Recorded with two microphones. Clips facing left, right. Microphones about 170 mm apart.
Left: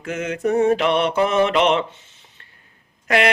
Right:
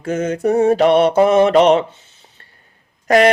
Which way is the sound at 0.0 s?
40° right (ahead or behind).